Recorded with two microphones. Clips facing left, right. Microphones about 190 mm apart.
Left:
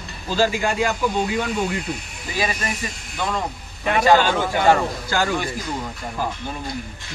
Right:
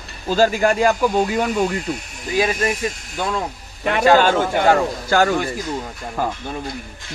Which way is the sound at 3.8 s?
50° right (ahead or behind).